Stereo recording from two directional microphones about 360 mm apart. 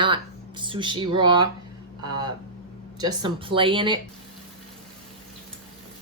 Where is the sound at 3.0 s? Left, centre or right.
Centre.